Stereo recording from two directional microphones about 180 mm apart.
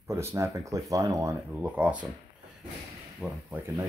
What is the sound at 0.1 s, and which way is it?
Speech, 15° right (ahead or behind).